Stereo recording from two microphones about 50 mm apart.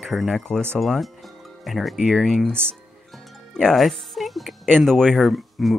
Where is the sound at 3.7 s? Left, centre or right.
Centre.